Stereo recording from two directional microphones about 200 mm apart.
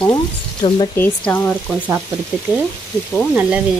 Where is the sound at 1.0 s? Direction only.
10° left (ahead or behind).